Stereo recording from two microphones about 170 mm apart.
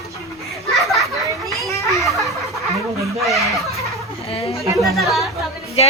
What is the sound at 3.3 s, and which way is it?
Laughter, centre (ahead or behind).